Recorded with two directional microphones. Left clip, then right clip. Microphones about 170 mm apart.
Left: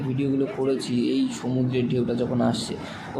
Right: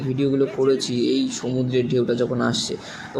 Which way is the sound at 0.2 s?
40° right (ahead or behind).